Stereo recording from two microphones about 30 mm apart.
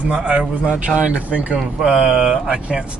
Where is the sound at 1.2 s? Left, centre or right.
Right.